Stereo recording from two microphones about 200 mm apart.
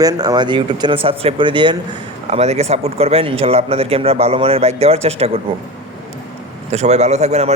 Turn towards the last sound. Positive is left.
turn(degrees=-35)  # may be behind; listen again after turning